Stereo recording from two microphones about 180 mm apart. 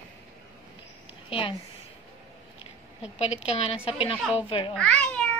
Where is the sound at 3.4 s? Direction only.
35° left (ahead or behind).